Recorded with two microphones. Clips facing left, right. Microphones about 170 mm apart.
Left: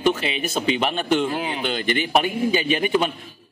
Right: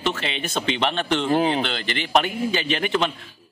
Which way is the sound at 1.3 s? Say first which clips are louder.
Right 7 dB; 40° right (ahead or behind).